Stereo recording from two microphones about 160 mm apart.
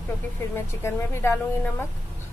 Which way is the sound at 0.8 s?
15° left (ahead or behind).